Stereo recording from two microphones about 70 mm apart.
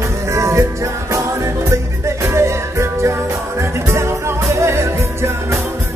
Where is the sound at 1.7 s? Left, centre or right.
Right.